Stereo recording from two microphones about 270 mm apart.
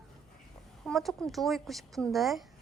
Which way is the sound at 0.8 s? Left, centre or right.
Centre.